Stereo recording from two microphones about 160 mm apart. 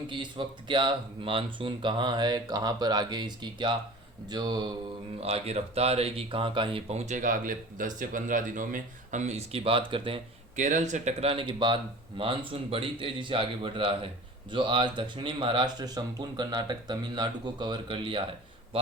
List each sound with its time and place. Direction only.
0.1 s speech: 30° right (ahead or behind)
5.2 s speech: 40° right (ahead or behind)
10.6 s speech: 50° right (ahead or behind); by 18.2 s 30° right (ahead or behind)